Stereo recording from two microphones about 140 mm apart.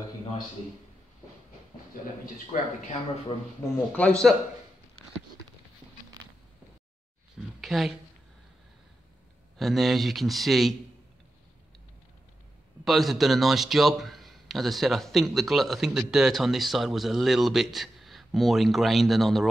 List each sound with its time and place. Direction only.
2.5 s speech: 50° left (ahead or behind)
3.9 s a man's voice: 5° left (ahead or behind)
7.6 s speech: centre (ahead or behind)
9.6 s a man's voice: centre (ahead or behind)
12.8 s a man's voice: centre (ahead or behind)